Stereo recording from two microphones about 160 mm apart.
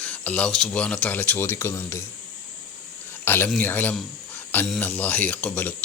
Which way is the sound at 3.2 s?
15° left (ahead or behind).